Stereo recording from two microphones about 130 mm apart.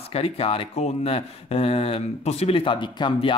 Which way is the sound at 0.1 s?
50° left (ahead or behind).